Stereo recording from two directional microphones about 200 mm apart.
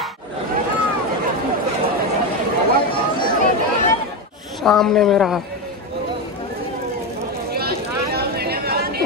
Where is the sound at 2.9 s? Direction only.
20° left (ahead or behind).